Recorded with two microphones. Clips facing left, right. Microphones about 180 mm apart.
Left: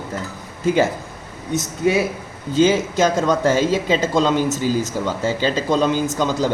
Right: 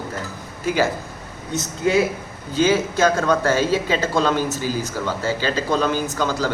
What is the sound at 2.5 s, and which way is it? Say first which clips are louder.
Speech: left 3 dB; 20° left (ahead or behind).